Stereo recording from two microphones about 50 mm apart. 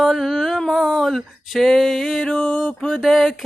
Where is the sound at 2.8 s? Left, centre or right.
Centre.